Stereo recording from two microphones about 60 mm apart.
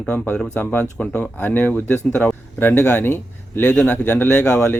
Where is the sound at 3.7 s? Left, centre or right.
Centre.